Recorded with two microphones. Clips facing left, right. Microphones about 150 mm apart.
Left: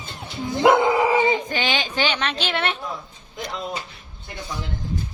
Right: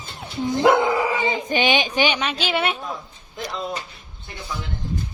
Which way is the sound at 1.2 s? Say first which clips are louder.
Right 1 dB; 20° right (ahead or behind).